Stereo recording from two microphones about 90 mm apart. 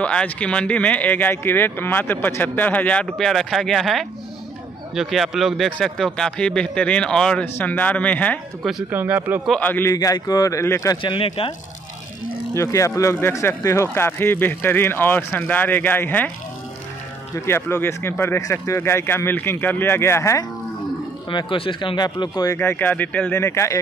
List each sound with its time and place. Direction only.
0.0 s speech: 10° left (ahead or behind)
7.5 s speech: 20° left (ahead or behind)
8.9 s speech: 20° right (ahead or behind)
9.6 s speech: 20° left (ahead or behind)
9.9 s speech: 45° left (ahead or behind)
11.0 s speech: 80° left
12.5 s speech: 35° left (ahead or behind); by 16.3 s 20° left (ahead or behind)
17.5 s speech: 30° left (ahead or behind)
21.3 s speech: 65° left (ahead or behind); by 22.5 s 50° left (ahead or behind)
22.5 s speech: 25° left (ahead or behind)
23.3 s speech: 30° left (ahead or behind)